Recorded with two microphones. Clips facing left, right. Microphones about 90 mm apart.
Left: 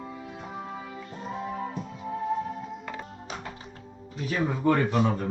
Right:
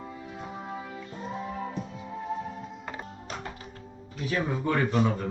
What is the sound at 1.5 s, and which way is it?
Music, 35° left (ahead or behind).